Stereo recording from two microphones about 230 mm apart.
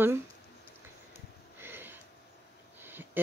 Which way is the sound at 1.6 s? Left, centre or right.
Centre.